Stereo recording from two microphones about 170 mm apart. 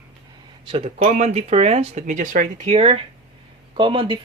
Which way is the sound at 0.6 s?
35° right (ahead or behind).